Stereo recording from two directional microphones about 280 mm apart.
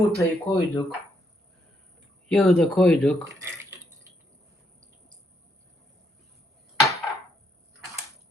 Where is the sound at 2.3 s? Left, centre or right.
Centre.